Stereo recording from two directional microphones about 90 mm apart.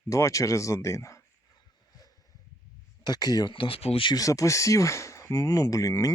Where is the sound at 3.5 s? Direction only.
80° left.